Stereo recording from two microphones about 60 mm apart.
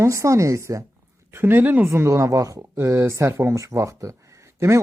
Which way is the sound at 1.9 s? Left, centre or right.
Right.